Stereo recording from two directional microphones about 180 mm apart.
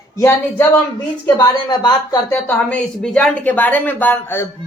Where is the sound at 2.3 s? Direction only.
10° left (ahead or behind).